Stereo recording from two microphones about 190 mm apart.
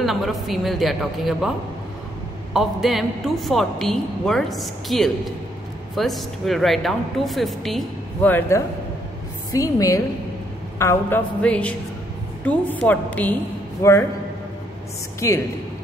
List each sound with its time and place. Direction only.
0.0 s a man's voice: centre (ahead or behind)
2.5 s a man's voice: centre (ahead or behind); by 14.0 s 15° left (ahead or behind)
15.1 s speech: 15° left (ahead or behind)